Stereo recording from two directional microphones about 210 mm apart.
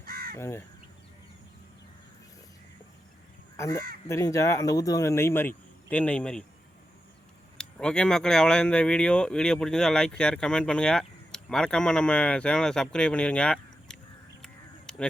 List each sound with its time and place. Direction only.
0.0 s crow: 45° right (ahead or behind)
0.3 s speech: 10° left (ahead or behind)
4.1 s speech: 15° left (ahead or behind)
7.6 s speech: 5° left (ahead or behind)
14.4 s a sound: 5° left (ahead or behind)